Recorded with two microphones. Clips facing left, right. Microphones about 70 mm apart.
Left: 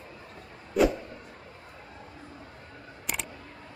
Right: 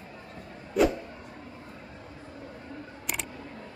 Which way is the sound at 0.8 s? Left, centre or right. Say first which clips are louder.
Even; centre.